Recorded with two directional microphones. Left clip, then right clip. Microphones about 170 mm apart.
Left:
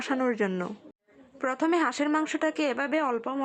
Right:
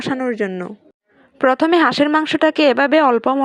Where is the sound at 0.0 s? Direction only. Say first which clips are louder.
Right 7 dB; 25° right (ahead or behind).